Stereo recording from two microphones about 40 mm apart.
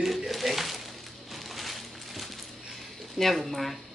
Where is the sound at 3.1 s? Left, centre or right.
Centre.